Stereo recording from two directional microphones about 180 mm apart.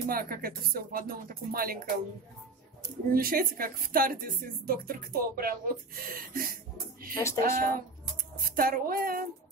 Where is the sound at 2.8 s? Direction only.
55° right (ahead or behind).